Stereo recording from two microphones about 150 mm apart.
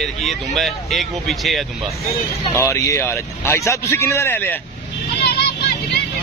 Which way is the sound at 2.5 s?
15° left (ahead or behind).